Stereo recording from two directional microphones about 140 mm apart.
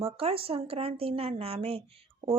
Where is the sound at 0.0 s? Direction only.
45° right (ahead or behind).